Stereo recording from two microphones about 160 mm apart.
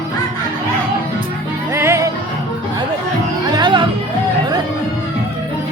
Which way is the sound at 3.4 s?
25° right (ahead or behind).